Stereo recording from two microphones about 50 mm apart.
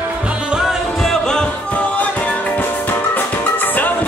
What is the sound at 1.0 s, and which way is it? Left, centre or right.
Music, centre.